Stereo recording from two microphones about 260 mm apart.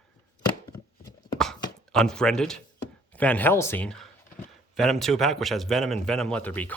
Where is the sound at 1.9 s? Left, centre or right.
Centre.